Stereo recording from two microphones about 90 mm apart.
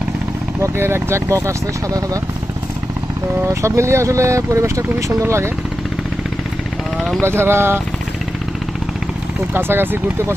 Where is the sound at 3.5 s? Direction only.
35° right (ahead or behind).